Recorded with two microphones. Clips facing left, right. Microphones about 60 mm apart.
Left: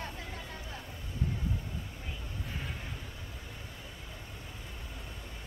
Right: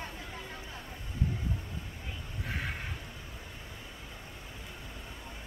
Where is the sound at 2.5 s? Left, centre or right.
Right.